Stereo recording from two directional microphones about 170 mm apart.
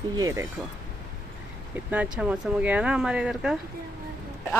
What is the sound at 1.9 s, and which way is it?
Speech, 5° right (ahead or behind).